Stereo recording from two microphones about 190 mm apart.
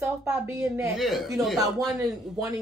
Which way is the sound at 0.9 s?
Centre (ahead or behind).